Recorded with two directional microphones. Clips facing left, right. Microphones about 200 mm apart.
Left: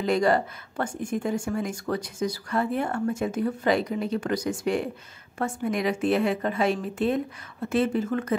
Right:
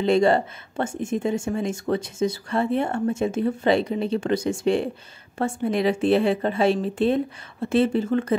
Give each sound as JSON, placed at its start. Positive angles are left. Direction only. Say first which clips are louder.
{"t": 0.0, "sound": "speech", "louder": "right 4 dB", "side_deg": -25}